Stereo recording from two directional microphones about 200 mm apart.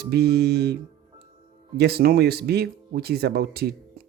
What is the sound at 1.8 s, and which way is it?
Speech, 55° right (ahead or behind).